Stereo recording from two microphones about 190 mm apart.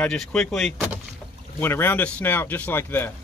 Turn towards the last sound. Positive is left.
turn(degrees=10)  # may be behind; listen again after turning